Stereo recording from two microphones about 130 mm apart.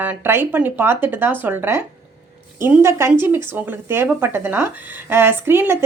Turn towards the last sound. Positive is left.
turn(degrees=-20)  # may be behind; listen again after turning